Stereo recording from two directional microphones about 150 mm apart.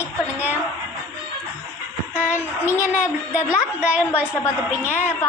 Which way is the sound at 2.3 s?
15° left (ahead or behind).